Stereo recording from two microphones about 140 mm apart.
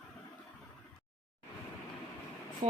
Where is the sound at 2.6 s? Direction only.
60° right (ahead or behind).